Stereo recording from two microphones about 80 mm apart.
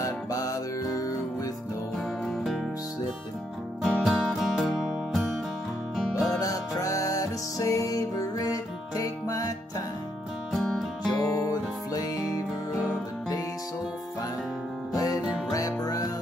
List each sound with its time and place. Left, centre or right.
0.0 s music: left
2.2 s music: centre
3.8 s music: centre
6.4 s music: left
10.5 s music: centre
11.1 s music: left
11.3 s music: left
14.9 s music: left